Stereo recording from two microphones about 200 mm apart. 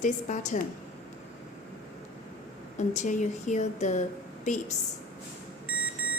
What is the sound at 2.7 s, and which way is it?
A woman's voice, 35° left (ahead or behind).